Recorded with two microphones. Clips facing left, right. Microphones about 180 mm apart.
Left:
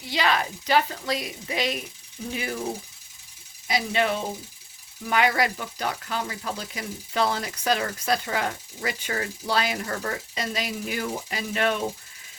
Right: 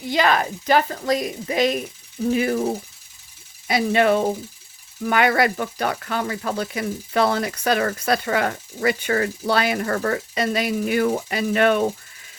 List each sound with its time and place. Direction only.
0.1 s a woman's voice: 50° right (ahead or behind)
3.7 s speech: 55° right (ahead or behind)